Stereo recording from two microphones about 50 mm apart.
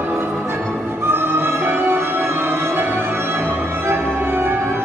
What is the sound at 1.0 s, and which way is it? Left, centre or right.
Music, right.